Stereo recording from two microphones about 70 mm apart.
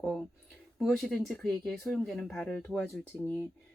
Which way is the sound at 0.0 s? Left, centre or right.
Centre.